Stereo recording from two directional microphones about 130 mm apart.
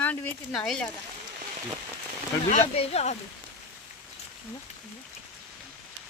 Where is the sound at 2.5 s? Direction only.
55° left (ahead or behind).